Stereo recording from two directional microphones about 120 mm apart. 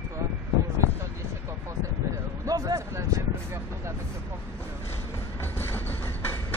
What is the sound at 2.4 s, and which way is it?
Speech, 30° right (ahead or behind).